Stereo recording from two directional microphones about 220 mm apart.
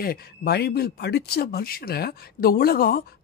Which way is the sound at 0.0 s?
45° left (ahead or behind).